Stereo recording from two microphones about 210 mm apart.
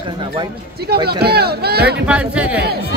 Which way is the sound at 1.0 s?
50° right (ahead or behind).